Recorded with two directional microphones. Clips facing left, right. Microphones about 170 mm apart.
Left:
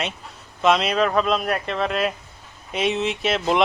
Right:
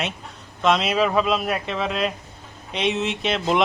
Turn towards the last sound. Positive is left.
turn(degrees=0)  # may be behind; listen again after turning